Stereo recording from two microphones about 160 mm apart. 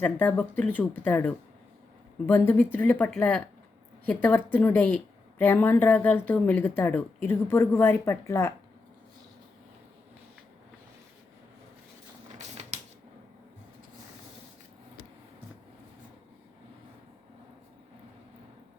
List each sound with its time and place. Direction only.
0.0 s a woman's voice: 10° left (ahead or behind)
12.6 s typewriter: 40° right (ahead or behind)